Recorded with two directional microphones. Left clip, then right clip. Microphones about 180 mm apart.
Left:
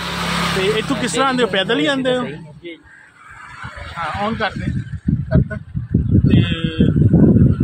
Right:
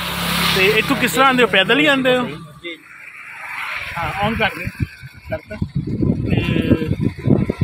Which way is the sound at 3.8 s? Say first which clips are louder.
Right 1 dB; centre (ahead or behind).